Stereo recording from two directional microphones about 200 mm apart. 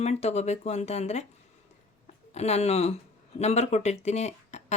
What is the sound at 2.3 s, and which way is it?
Speech, 35° left (ahead or behind).